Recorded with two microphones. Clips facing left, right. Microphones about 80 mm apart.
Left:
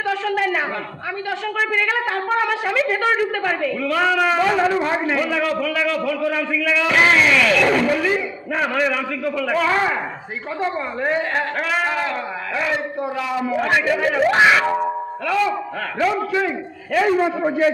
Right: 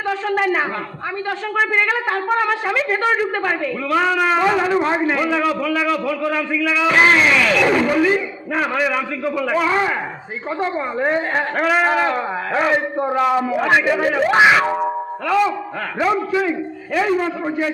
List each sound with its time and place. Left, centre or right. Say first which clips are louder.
0.1 s a man's voice: right 2 dB; right
2.3 s a man's voice: right 1 dB; centre
7.5 s a sound: right 1 dB; centre
7.8 s a man's voice: right 2 dB; centre; by 13.4 s right
13.6 s a man's voice: left 1 dB; centre
16.9 s a sound: left 1 dB; centre
17.2 s a man's voice: left 3 dB; centre